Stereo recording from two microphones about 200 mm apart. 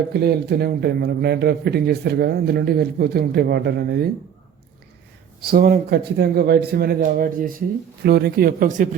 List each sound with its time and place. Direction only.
0.1 s a man's voice: 55° right (ahead or behind)
5.4 s a man's voice: 45° right (ahead or behind)